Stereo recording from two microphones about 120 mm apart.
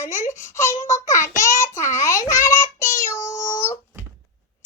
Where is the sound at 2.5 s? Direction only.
90° left.